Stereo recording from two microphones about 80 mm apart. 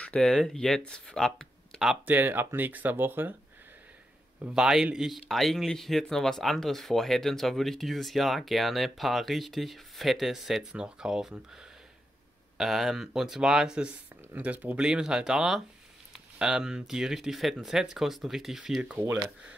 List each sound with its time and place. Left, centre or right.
0.0 s speech: centre
2.0 s speech: right
4.6 s speech: centre
12.5 s speech: centre
14.8 s speech: centre